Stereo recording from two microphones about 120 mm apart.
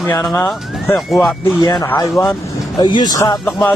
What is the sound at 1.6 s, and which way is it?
Speech, 35° left (ahead or behind).